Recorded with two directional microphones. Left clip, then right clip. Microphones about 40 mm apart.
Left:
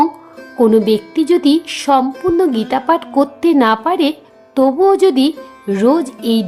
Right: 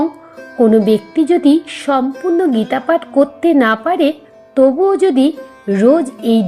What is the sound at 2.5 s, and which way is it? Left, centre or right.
Speech, left.